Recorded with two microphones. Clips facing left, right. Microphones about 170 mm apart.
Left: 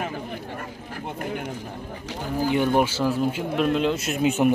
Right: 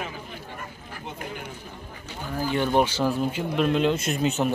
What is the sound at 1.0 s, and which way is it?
Speech, 55° left (ahead or behind).